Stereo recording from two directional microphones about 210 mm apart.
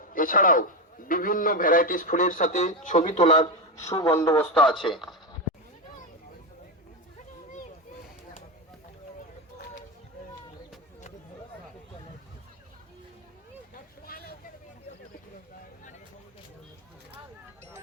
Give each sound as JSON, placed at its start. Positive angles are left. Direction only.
{"t": 0.0, "sound": "a sound", "side_deg": 40}
{"t": 1.0, "sound": "a man's voice", "side_deg": 40}
{"t": 4.1, "sound": "a man's voice", "side_deg": 10}
{"t": 14.1, "sound": "vehicle", "side_deg": 45}